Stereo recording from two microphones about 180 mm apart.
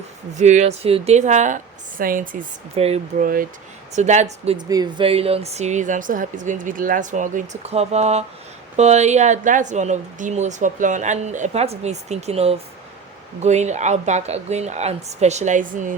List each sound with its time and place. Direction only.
0.3 s speech: 40° right (ahead or behind)
2.7 s speech: 35° right (ahead or behind)
4.5 s speech: 25° right (ahead or behind)
5.0 s speech: 35° right (ahead or behind)